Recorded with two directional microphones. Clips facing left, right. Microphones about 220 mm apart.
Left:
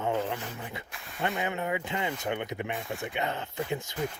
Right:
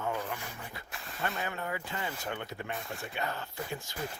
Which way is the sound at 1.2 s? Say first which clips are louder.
Left 5 dB; 20° left (ahead or behind).